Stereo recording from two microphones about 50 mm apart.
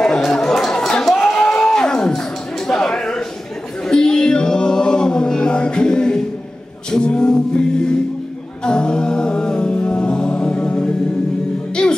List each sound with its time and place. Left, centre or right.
0.0 s chatter: centre
1.0 s a sound: centre
3.8 s music: centre
8.6 s a capella: centre
11.8 s music: centre